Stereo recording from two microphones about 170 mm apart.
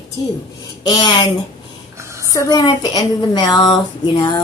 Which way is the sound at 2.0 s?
15° right (ahead or behind).